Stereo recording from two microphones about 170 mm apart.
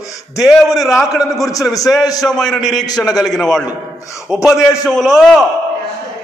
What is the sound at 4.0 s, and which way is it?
Speech, 20° left (ahead or behind).